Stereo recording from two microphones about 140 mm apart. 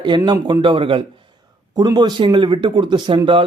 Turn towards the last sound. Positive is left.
turn(degrees=-35)  # may be behind; listen again after turning